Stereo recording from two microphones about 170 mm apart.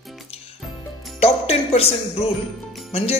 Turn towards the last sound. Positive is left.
turn(degrees=35)  # may be behind; listen again after turning